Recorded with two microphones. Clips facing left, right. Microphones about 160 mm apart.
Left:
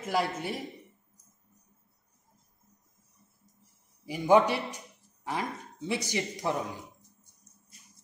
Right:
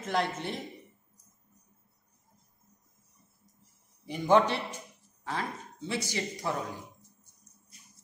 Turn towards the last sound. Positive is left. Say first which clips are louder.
# left 2 dB
turn(degrees=15)  # may be behind; listen again after turning